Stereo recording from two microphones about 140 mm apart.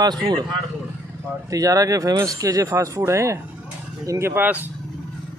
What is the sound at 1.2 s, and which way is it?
Speech, 25° right (ahead or behind).